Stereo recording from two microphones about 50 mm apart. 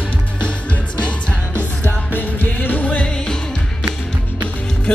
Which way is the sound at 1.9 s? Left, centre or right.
Left.